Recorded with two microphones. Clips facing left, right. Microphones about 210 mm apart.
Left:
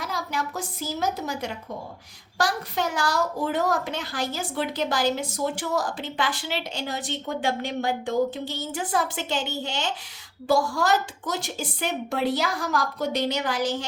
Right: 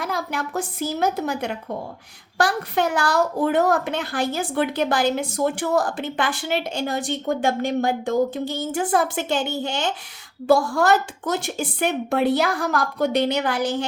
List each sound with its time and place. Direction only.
0.0 s a woman's voice: 55° right (ahead or behind)